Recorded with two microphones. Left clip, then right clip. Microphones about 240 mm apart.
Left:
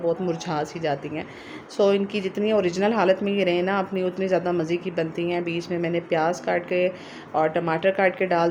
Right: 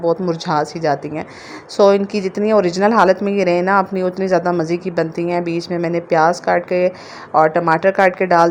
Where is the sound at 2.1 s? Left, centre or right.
Right.